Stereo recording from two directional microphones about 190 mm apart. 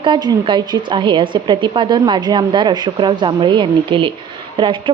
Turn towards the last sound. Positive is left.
turn(degrees=-25)  # may be behind; listen again after turning